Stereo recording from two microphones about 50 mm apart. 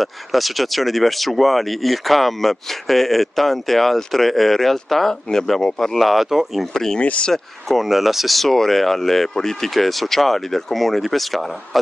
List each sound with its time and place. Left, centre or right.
0.0 s speech: centre
6.7 s speech: centre
7.0 s speech: left
7.6 s speech: centre